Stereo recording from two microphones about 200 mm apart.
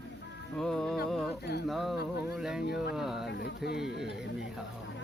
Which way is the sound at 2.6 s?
55° left (ahead or behind).